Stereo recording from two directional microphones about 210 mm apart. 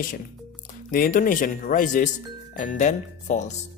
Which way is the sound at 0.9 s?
40° left (ahead or behind).